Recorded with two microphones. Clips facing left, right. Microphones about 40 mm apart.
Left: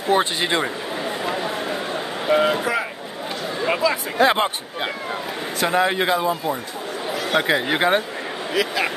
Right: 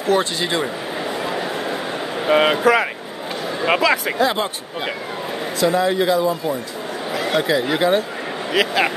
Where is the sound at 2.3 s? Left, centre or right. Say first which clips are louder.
Right 5 dB; right.